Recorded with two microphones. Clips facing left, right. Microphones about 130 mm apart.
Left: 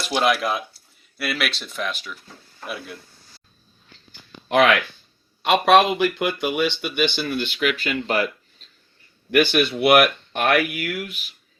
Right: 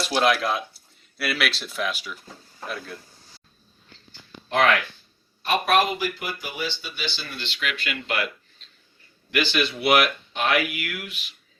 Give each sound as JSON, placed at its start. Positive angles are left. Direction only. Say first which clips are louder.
{"t": 0.0, "sound": "speech", "louder": "left 1 dB", "side_deg": 0}
{"t": 2.6, "sound": "speech", "louder": "left 1 dB", "side_deg": 10}
{"t": 4.1, "sound": "a sound", "louder": "left 6 dB", "side_deg": 70}
{"t": 5.4, "sound": "speech", "louder": "left 6 dB", "side_deg": 90}
{"t": 9.3, "sound": "speech", "louder": "left 6 dB", "side_deg": 55}